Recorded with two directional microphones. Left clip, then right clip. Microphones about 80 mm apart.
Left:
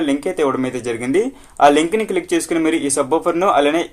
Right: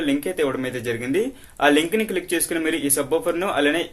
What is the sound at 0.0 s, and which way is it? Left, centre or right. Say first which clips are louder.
Speech: left 4 dB; centre.